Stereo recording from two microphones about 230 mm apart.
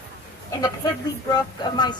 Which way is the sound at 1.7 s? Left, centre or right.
Centre.